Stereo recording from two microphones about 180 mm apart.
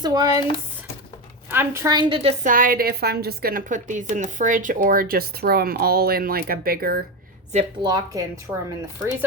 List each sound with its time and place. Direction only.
0.0 s speech: 20° right (ahead or behind)
1.5 s speech: 15° right (ahead or behind)
2.4 s a woman's voice: 50° right (ahead or behind)
7.8 s speech: 20° right (ahead or behind)